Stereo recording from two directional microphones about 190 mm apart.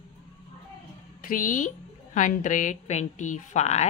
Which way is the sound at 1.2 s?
45° left (ahead or behind).